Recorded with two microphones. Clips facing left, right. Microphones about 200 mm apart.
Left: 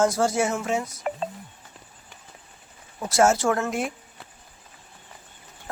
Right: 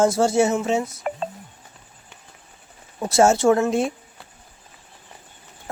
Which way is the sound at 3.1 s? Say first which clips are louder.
Right 4 dB; 25° right (ahead or behind).